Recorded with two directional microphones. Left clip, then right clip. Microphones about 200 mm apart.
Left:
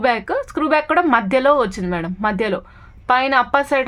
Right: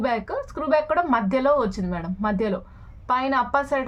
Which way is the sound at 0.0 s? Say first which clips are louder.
Left 7 dB; 30° left (ahead or behind).